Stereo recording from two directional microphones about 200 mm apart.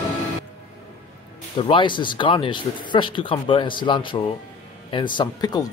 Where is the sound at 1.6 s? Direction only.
25° left (ahead or behind).